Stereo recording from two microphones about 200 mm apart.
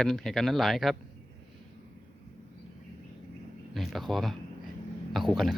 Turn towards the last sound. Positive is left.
turn(degrees=0)  # may be behind; listen again after turning